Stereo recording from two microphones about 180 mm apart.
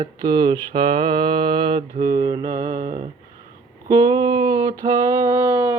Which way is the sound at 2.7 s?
40° right (ahead or behind).